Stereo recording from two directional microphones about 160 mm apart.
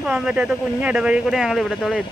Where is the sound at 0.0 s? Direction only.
5° right (ahead or behind).